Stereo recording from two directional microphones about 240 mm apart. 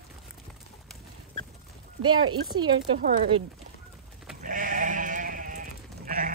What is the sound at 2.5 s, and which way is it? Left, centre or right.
Speech, centre.